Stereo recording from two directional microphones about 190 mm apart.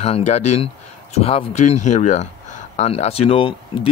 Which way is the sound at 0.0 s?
35° left (ahead or behind).